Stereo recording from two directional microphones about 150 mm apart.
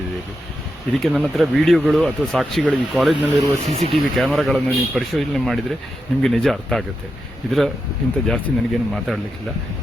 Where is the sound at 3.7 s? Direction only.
45° right (ahead or behind).